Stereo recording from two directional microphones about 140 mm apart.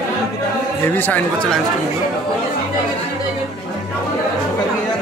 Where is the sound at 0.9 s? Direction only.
15° left (ahead or behind).